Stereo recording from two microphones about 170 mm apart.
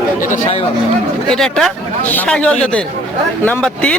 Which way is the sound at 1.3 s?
Centre (ahead or behind).